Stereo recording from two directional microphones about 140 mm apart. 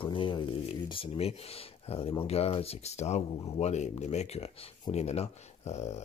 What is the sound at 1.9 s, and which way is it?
Speech, 45° left (ahead or behind).